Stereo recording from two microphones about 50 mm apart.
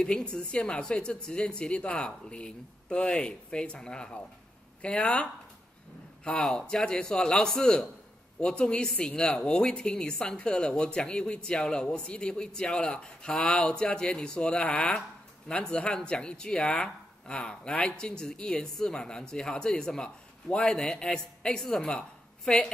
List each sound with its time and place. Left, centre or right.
0.0 s a woman's voice: centre